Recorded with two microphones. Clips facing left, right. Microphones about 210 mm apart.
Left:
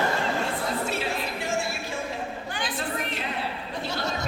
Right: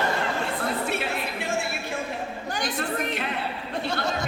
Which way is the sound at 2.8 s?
60° right (ahead or behind).